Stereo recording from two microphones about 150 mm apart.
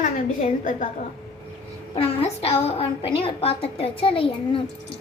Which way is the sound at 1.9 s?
40° left (ahead or behind).